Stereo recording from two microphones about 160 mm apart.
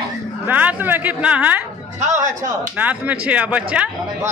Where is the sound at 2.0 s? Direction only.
50° right (ahead or behind).